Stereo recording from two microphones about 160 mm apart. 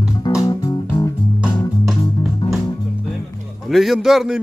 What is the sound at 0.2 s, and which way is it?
Music, 25° left (ahead or behind).